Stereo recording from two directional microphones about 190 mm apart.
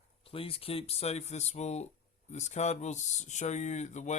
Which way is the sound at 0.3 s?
30° left (ahead or behind).